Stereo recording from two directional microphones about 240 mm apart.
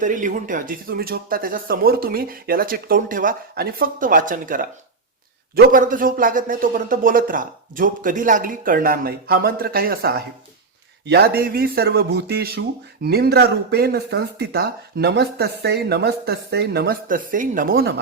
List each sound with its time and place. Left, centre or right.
0.0 s speech: right